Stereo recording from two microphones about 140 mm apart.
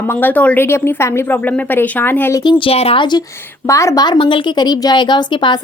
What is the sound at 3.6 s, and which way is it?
A woman's voice, 20° left (ahead or behind).